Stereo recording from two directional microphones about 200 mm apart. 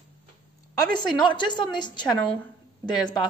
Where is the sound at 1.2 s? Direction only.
20° left (ahead or behind).